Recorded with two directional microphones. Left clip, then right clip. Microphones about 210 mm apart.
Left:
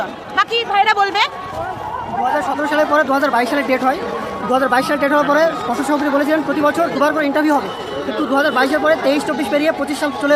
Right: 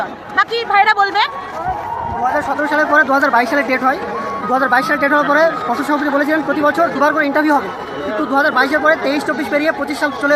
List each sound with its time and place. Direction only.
0.3 s speech: 15° left (ahead or behind)
2.6 s speech: 5° left (ahead or behind)